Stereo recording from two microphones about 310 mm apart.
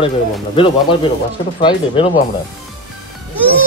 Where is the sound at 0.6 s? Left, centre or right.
Centre.